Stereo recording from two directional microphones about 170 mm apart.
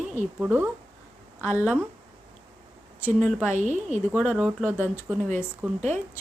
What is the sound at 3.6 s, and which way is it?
Speech, 45° right (ahead or behind).